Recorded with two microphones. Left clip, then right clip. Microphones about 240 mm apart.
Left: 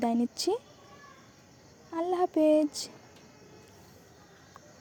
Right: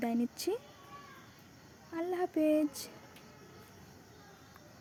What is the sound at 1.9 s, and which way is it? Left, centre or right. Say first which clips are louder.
Speech: left 6 dB; centre.